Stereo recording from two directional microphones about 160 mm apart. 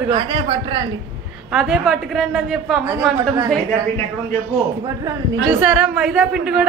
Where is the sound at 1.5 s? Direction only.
5° right (ahead or behind).